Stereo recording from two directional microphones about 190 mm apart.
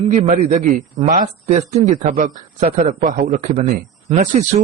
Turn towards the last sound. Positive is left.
turn(degrees=-35)  # may be behind; listen again after turning